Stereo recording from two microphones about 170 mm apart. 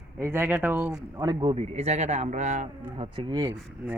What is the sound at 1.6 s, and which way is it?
A man's voice, 40° right (ahead or behind).